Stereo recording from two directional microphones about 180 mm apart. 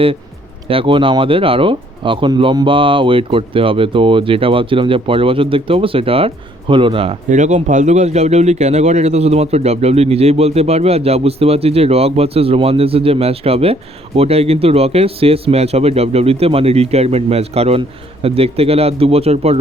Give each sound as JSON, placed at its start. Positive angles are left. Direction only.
{"t": 0.7, "sound": "speech", "side_deg": -30}